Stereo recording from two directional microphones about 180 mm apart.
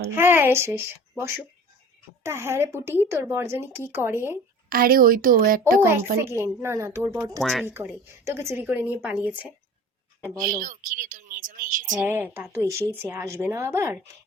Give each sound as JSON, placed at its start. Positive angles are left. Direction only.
{"t": 0.2, "sound": "a woman's voice", "side_deg": -10}
{"t": 4.7, "sound": "speech", "side_deg": -55}
{"t": 5.8, "sound": "a woman's voice", "side_deg": -15}
{"t": 10.3, "sound": "speech", "side_deg": -50}
{"t": 11.9, "sound": "a woman's voice", "side_deg": -10}